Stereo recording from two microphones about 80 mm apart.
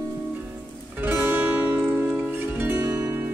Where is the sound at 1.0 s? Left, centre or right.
Right.